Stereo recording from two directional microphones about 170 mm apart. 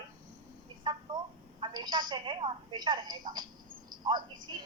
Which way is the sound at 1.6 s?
25° right (ahead or behind).